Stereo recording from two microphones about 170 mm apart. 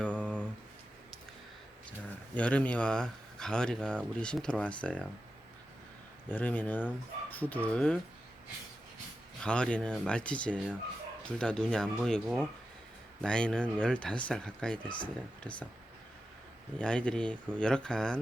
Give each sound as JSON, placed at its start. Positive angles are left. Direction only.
{"t": 0.0, "sound": "a sound", "side_deg": 5}
{"t": 2.3, "sound": "speech", "side_deg": 10}
{"t": 6.2, "sound": "speech", "side_deg": 10}
{"t": 9.4, "sound": "speech", "side_deg": 5}
{"t": 14.8, "sound": "speech", "side_deg": 30}
{"t": 16.7, "sound": "speech", "side_deg": 5}